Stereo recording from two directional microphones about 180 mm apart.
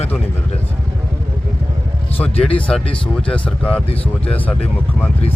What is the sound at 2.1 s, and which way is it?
Speech, 10° left (ahead or behind).